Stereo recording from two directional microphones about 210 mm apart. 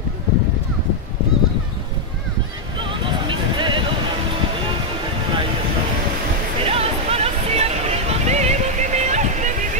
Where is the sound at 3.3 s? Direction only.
25° right (ahead or behind).